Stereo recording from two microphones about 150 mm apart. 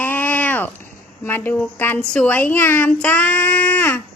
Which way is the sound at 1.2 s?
15° left (ahead or behind).